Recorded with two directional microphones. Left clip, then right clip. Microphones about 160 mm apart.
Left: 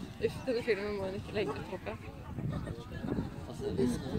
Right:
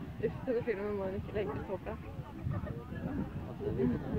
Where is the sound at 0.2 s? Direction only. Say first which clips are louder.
Left 1 dB; 40° right (ahead or behind).